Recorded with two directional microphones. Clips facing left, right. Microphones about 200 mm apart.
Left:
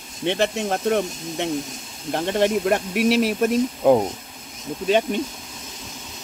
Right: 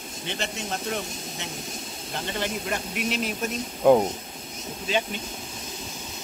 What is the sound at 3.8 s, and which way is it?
Speech, 5° left (ahead or behind).